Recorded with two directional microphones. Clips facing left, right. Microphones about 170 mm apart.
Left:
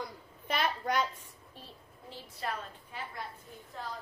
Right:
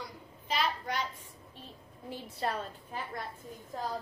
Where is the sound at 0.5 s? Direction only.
50° left (ahead or behind).